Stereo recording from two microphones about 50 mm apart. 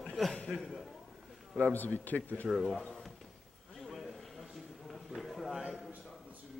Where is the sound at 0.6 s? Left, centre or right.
Centre.